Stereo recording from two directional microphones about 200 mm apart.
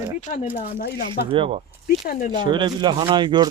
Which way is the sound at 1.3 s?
30° right (ahead or behind).